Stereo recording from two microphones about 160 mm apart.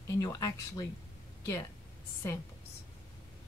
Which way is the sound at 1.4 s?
20° left (ahead or behind).